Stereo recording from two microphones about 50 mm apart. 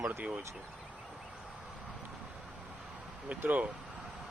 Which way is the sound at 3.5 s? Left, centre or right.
Right.